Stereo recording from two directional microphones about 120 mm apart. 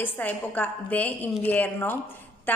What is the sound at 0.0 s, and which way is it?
A woman's voice, 15° left (ahead or behind).